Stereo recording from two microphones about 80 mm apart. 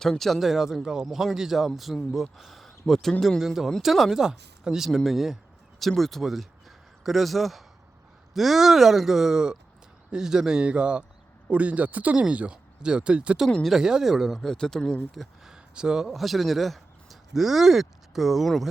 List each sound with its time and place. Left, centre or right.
0.0 s speech: centre
13.5 s speech: centre
13.7 s speech: centre
15.5 s speech: centre